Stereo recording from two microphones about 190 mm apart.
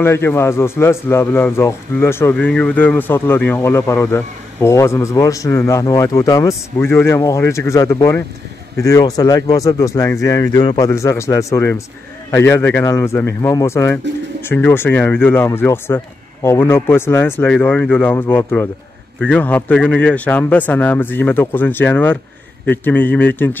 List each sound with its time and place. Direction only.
0.0 s speech: 10° left (ahead or behind)